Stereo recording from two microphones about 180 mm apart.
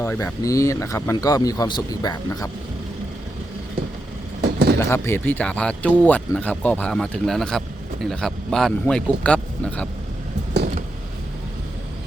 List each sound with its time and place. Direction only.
0.0 s speech: 15° left (ahead or behind)
4.4 s vehicle: 65° right (ahead or behind)
4.8 s speech: 15° left (ahead or behind)